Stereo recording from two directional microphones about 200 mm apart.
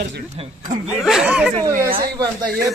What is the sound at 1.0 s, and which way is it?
Speech, centre (ahead or behind).